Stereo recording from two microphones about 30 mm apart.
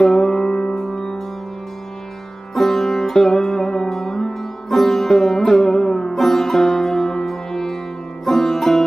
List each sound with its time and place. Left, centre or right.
0.1 s music: centre
0.8 s music: centre
2.5 s music: centre